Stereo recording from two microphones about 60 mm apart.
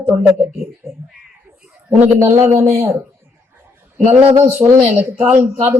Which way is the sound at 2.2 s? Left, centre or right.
Right.